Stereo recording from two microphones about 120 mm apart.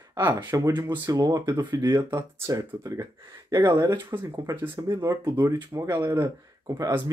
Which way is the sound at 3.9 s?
20° right (ahead or behind).